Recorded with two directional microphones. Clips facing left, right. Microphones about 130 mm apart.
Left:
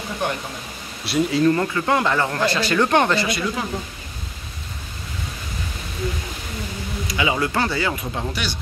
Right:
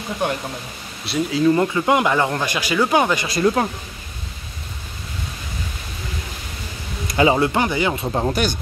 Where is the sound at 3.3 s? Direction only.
45° right (ahead or behind).